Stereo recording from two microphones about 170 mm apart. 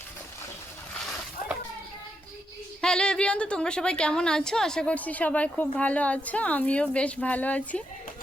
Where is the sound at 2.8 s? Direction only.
5° left (ahead or behind).